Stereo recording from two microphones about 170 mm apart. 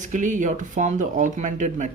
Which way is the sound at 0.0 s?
50° right (ahead or behind).